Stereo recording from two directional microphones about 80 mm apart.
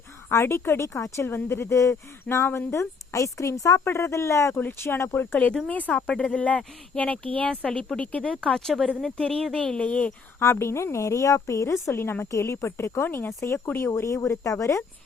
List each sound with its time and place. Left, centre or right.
0.3 s speech: left
1.7 s speech: left
3.1 s speech: left
4.5 s speech: left
10.4 s speech: left